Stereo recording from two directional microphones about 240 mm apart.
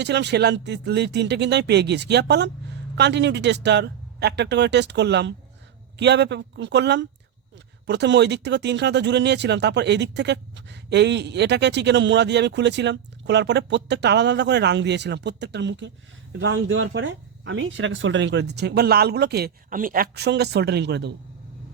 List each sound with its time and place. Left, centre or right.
0.0 s speech: right